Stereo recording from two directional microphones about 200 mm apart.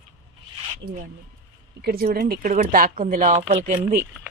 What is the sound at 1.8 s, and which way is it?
Speech, 50° right (ahead or behind).